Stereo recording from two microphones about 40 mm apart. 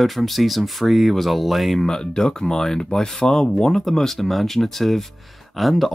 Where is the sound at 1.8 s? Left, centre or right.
Centre.